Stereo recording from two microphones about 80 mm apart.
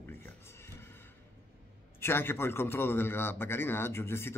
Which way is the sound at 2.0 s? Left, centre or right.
Left.